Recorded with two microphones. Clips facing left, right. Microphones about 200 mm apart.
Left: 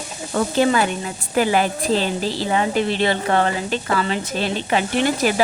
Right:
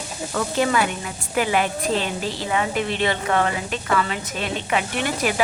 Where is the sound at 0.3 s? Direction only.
30° left (ahead or behind).